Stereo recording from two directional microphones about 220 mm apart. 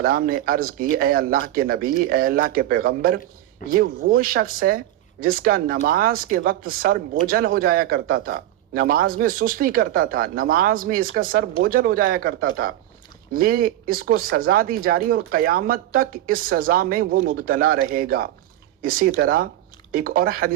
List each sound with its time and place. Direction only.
0.0 s speech: 40° right (ahead or behind)